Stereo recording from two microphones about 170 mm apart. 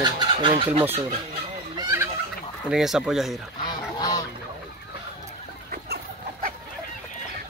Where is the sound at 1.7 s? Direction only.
20° right (ahead or behind).